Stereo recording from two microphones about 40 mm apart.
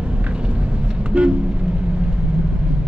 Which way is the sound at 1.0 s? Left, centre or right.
Right.